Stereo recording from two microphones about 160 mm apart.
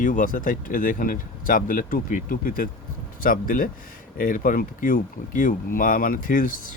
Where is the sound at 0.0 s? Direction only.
55° left (ahead or behind).